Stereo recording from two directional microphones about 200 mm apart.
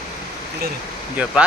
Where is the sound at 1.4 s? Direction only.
5° right (ahead or behind).